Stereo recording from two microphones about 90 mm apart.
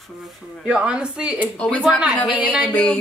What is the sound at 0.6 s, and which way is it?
Speech, 10° right (ahead or behind).